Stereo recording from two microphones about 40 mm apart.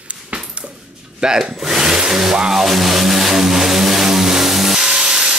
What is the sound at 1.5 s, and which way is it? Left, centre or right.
Vehicle, centre.